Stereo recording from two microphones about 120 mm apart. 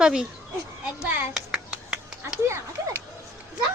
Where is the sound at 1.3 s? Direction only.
5° right (ahead or behind).